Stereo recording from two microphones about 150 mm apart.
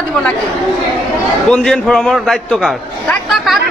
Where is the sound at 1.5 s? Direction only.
5° left (ahead or behind).